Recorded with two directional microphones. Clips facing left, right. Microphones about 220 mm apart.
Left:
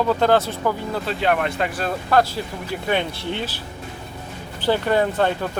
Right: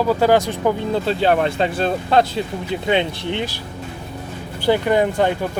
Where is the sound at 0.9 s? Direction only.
30° right (ahead or behind).